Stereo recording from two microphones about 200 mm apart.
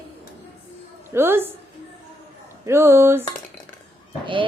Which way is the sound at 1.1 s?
10° right (ahead or behind).